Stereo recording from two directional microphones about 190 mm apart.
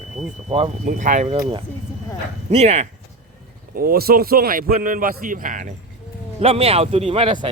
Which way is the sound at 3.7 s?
50° right (ahead or behind).